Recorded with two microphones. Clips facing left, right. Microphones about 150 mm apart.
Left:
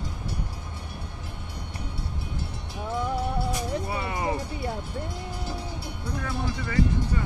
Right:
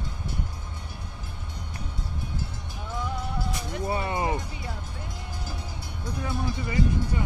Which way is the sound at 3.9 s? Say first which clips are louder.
Right 2 dB; 25° right (ahead or behind).